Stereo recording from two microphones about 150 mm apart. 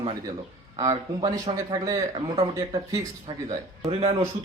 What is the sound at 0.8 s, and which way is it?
Speech, 25° right (ahead or behind).